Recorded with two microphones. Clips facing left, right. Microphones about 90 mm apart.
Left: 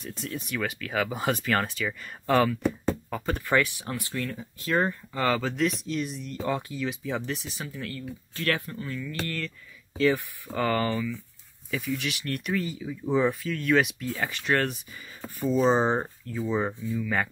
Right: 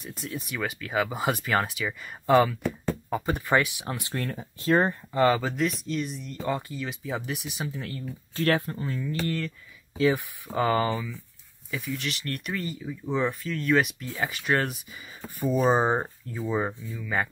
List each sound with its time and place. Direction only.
0.0 s speech: 5° right (ahead or behind); by 4.1 s 20° right (ahead or behind)
4.1 s speech: 40° right (ahead or behind); by 5.4 s 20° right (ahead or behind)
5.4 s speech: centre (ahead or behind); by 8.0 s 20° right (ahead or behind)
8.4 s speech: 35° right (ahead or behind)
9.9 s speech: 15° right (ahead or behind)
11.7 s speech: centre (ahead or behind)